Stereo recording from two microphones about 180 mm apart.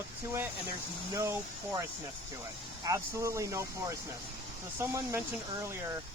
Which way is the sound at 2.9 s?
15° right (ahead or behind).